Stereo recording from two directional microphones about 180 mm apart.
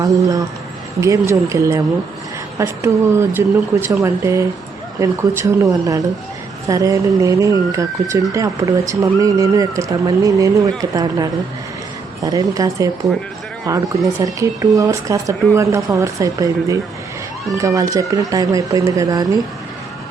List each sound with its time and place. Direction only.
0.0 s speech: 20° right (ahead or behind)